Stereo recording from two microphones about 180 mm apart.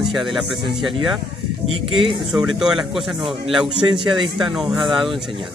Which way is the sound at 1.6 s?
30° right (ahead or behind).